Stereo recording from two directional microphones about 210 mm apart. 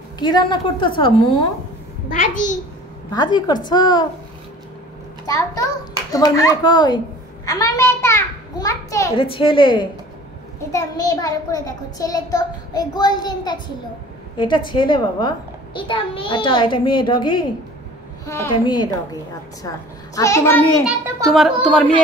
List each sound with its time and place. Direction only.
0.2 s a woman's voice: 20° left (ahead or behind)
2.1 s a child's voice: 35° left (ahead or behind)
3.1 s a woman's voice: 20° left (ahead or behind)
5.2 s a child's voice: 15° left (ahead or behind)
7.4 s a sound: 15° left (ahead or behind)
9.1 s a woman's voice: 25° left (ahead or behind)
20.2 s a child's voice: 15° left (ahead or behind)
20.8 s a child's voice: 10° right (ahead or behind)